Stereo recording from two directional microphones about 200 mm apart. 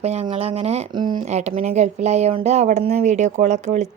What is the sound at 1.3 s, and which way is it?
A woman's voice, 35° right (ahead or behind).